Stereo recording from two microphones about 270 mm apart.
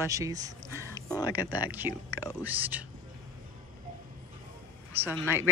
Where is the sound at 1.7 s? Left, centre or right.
Centre.